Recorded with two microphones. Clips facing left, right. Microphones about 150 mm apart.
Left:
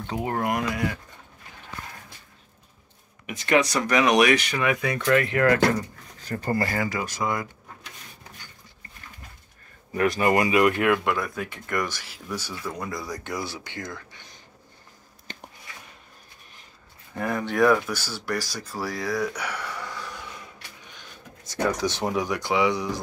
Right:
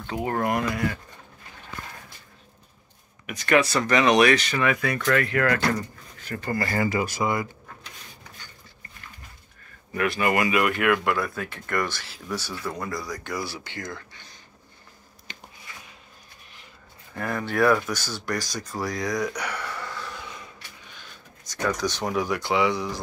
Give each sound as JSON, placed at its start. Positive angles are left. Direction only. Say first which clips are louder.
{"t": 0.2, "sound": "speech", "louder": "right 2 dB", "side_deg": 10}
{"t": 3.3, "sound": "speech", "louder": "right 1 dB", "side_deg": 20}
{"t": 6.2, "sound": "speech", "louder": "left 2 dB", "side_deg": 35}
{"t": 6.7, "sound": "speech", "louder": "right 3 dB", "side_deg": -5}
{"t": 9.9, "sound": "speech", "louder": "left 2 dB", "side_deg": 35}
{"t": 13.0, "sound": "speech", "louder": "even", "side_deg": 25}
{"t": 17.1, "sound": "speech", "louder": "left 1 dB", "side_deg": 10}
{"t": 18.8, "sound": "a sound", "louder": "even", "side_deg": 5}
{"t": 21.7, "sound": "speech", "louder": "left 1 dB", "side_deg": 25}